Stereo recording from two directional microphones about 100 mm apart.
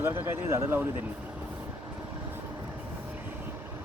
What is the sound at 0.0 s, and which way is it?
Speech, 25° right (ahead or behind).